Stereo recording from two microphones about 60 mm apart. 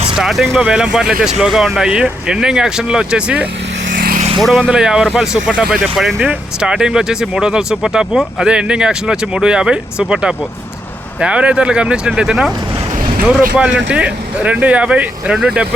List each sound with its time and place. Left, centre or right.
0.2 s speech: centre
0.6 s speech: centre
4.4 s speech: centre
4.7 s speech: centre
6.0 s speech: centre
6.6 s speech: centre